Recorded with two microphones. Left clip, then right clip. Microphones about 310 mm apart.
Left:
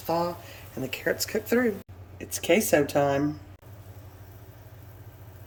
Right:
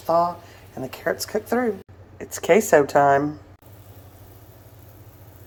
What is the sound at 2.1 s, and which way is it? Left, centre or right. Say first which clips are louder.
Speech: right 6 dB; right.